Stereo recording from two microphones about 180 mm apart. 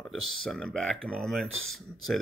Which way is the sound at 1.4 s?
90° right.